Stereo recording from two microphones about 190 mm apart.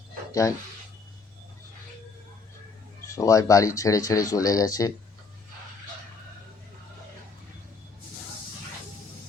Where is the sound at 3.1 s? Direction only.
15° left (ahead or behind).